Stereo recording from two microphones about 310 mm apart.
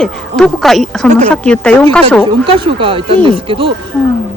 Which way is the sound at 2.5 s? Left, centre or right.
Centre.